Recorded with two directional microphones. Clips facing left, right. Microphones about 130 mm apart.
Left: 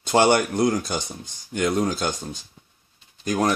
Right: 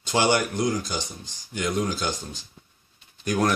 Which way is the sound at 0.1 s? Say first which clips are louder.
Left 4 dB; 50° left (ahead or behind).